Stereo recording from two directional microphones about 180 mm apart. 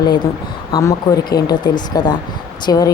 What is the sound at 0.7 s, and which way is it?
Speech, 20° left (ahead or behind).